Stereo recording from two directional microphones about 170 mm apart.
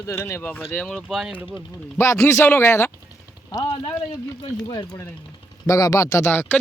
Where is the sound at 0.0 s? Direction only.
15° left (ahead or behind).